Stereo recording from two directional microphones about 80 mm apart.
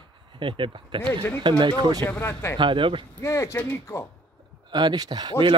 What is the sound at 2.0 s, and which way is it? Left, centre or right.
Speech, left.